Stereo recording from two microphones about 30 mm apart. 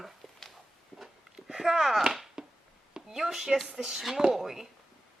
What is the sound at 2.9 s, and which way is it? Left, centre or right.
A woman's voice, centre.